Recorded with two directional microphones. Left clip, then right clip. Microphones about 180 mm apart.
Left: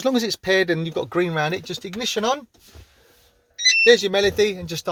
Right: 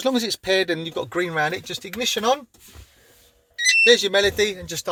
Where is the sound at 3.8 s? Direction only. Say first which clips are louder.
Left 1 dB; 40° left (ahead or behind).